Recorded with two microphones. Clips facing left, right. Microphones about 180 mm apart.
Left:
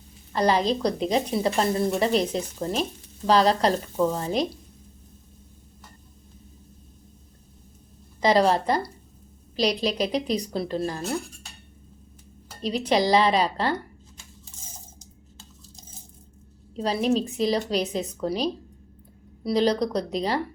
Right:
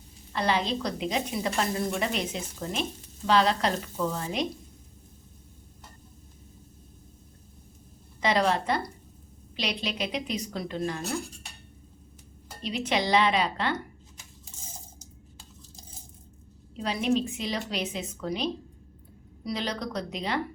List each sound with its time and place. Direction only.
0.3 s speech: 40° left (ahead or behind)
8.2 s speech: 35° left (ahead or behind)
12.6 s speech: 35° left (ahead or behind)
16.7 s speech: 35° left (ahead or behind)